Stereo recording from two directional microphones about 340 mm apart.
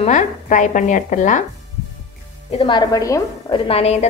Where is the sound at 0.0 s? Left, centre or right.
Left.